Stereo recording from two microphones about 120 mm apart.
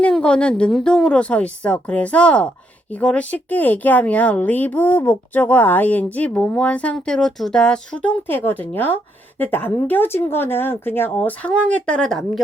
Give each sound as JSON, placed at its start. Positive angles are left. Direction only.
{"t": 0.0, "sound": "speech", "side_deg": 10}